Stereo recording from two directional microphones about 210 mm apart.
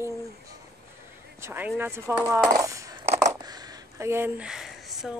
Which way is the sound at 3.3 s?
20° right (ahead or behind).